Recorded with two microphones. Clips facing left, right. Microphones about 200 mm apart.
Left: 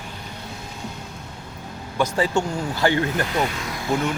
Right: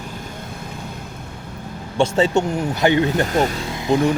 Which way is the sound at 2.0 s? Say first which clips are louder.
Right 5 dB; 25° right (ahead or behind).